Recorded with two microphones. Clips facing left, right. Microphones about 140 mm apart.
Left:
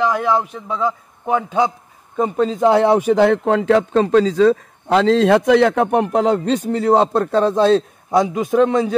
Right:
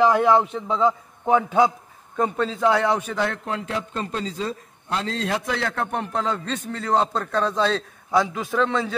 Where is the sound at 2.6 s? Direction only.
25° left (ahead or behind).